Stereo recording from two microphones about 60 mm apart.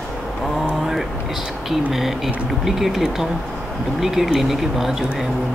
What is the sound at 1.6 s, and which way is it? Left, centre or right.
Speech, centre.